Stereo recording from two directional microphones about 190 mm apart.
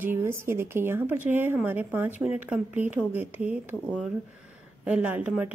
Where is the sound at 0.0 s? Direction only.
15° right (ahead or behind).